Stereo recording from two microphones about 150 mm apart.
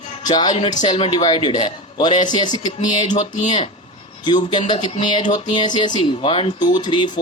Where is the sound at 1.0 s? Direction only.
35° left (ahead or behind).